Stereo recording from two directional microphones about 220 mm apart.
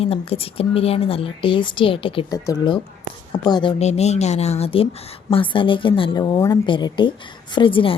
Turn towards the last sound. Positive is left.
turn(degrees=25)  # may be behind; listen again after turning